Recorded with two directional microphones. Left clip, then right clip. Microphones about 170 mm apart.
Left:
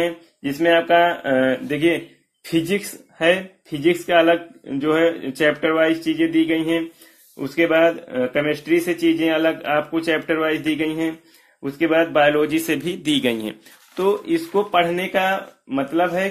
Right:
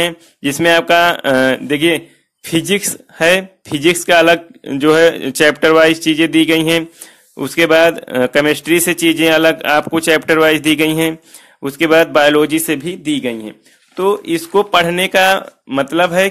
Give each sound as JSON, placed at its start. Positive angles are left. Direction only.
{"t": 0.0, "sound": "a man's voice", "side_deg": -50}
{"t": 13.9, "sound": "speech", "side_deg": -25}